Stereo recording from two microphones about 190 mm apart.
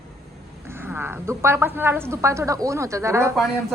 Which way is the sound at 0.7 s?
10° right (ahead or behind).